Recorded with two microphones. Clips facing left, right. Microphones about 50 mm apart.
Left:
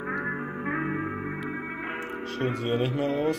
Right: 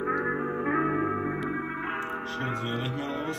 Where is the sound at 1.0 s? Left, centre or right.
Centre.